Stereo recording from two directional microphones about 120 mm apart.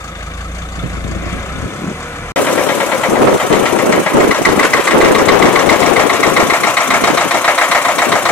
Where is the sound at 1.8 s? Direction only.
20° left (ahead or behind).